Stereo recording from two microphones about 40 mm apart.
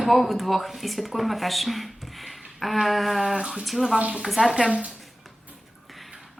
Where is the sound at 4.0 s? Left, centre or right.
Right.